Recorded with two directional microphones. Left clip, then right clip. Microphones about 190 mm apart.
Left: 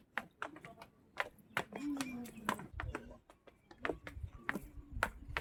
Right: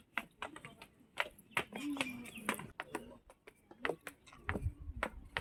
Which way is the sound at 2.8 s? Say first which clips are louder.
Right 1 dB; 15° right (ahead or behind).